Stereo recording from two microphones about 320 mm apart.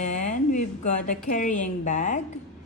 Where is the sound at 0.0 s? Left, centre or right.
Left.